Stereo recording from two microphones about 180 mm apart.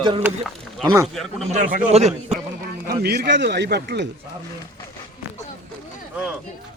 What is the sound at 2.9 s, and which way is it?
A man's voice, 60° right (ahead or behind).